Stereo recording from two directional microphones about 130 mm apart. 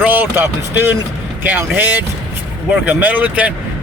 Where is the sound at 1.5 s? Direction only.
15° right (ahead or behind).